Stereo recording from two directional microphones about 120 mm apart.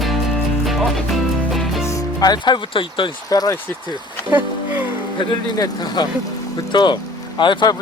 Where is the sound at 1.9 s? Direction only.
30° left (ahead or behind).